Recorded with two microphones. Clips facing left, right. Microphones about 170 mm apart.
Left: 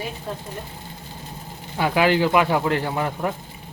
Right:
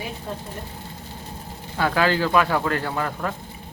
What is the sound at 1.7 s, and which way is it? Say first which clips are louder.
Speech: left 2 dB; 15° left (ahead or behind).